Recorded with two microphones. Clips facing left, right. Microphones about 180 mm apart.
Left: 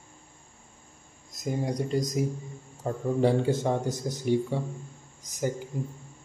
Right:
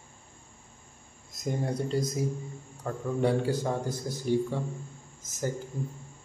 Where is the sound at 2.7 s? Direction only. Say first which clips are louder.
Left 4 dB; 25° left (ahead or behind).